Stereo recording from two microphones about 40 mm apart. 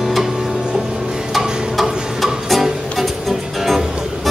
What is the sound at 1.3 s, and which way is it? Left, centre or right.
Music, centre.